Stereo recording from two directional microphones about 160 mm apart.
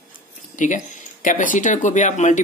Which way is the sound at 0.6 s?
55° left (ahead or behind).